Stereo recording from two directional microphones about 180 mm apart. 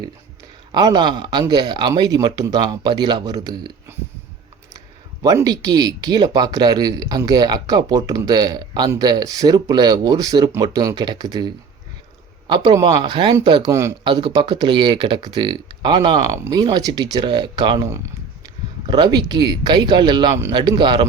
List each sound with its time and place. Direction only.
0.7 s speech: 25° right (ahead or behind)
5.2 s speech: 20° right (ahead or behind)
14.0 s speech: 30° right (ahead or behind)